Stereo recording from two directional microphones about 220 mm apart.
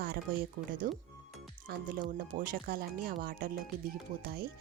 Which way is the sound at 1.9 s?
40° right (ahead or behind).